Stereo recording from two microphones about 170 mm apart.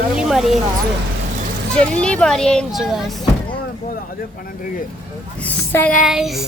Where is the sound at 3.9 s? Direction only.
55° left (ahead or behind).